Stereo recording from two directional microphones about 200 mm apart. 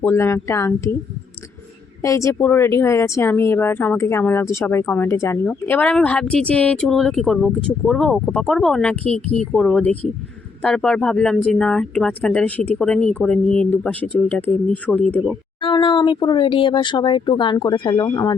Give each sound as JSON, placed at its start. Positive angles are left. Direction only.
{"t": 0.0, "sound": "speech", "side_deg": 10}
{"t": 2.0, "sound": "speech", "side_deg": 15}
{"t": 15.6, "sound": "speech", "side_deg": 25}